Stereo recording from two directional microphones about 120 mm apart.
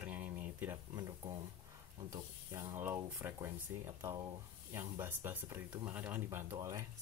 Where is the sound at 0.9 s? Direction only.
30° right (ahead or behind).